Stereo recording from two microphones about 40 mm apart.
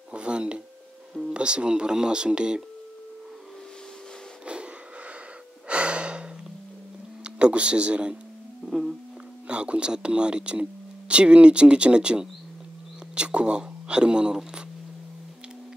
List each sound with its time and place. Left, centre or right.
0.1 s a sound: right
1.3 s speech: right
5.7 s gasp: right
7.2 s speech: right
8.6 s a sound: centre
9.5 s speech: right